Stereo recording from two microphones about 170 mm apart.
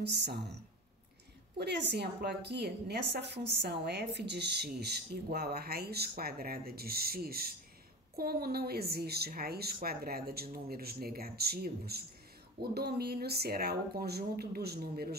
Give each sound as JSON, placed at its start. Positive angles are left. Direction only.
{"t": 0.1, "sound": "a woman's voice", "side_deg": -75}
{"t": 1.6, "sound": "a woman's voice", "side_deg": -75}